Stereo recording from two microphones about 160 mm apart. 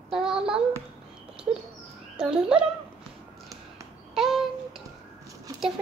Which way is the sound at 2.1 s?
5° right (ahead or behind).